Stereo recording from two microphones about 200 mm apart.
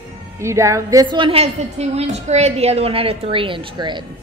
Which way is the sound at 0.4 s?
15° right (ahead or behind).